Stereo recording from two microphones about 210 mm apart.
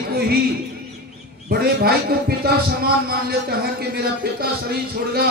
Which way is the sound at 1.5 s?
45° right (ahead or behind).